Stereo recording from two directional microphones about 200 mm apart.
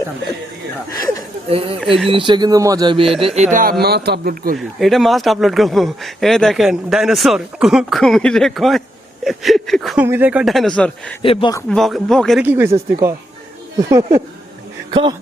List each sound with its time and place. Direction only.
1.5 s speech: 30° right (ahead or behind); by 4.5 s 50° right (ahead or behind)
4.5 s speech: centre (ahead or behind)
11.2 s a man's voice: 25° left (ahead or behind)
11.7 s speech: centre (ahead or behind)
12.4 s speech: 10° right (ahead or behind)
13.7 s speech: 15° right (ahead or behind)